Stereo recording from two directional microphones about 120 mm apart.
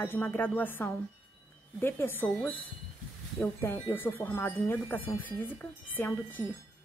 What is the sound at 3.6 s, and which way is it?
Speech, 20° left (ahead or behind).